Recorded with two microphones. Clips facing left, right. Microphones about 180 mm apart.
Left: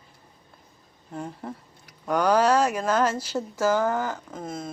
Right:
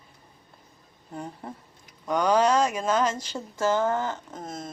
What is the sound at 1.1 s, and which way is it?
Speech, centre (ahead or behind).